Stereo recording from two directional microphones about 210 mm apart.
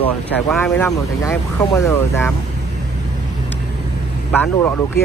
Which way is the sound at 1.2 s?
15° left (ahead or behind).